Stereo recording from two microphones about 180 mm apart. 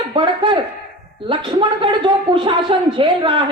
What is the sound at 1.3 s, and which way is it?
A woman's voice, 30° right (ahead or behind).